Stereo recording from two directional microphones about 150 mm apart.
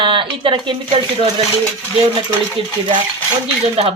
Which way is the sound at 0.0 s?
35° right (ahead or behind).